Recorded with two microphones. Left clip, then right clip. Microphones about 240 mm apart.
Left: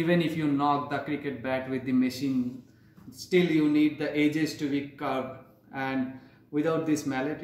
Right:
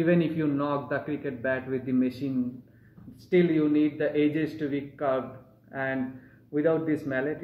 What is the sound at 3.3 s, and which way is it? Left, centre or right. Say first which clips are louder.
Speech: right 1 dB; left.